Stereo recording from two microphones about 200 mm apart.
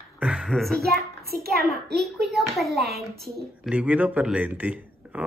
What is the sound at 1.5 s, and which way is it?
Speech, centre (ahead or behind).